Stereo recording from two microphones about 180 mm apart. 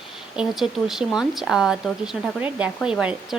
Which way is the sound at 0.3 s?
Centre (ahead or behind).